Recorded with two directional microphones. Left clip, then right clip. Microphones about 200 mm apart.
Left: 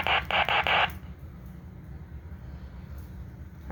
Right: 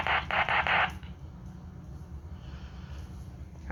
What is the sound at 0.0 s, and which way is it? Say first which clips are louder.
Radio: left 3 dB; 30° left (ahead or behind).